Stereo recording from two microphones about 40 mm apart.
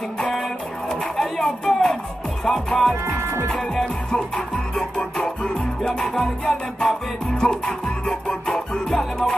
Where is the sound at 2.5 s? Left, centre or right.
Centre.